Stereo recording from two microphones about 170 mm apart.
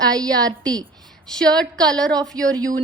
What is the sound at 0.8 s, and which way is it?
A woman's voice, 5° left (ahead or behind).